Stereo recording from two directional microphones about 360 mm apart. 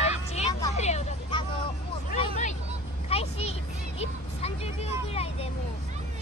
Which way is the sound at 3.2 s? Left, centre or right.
Centre.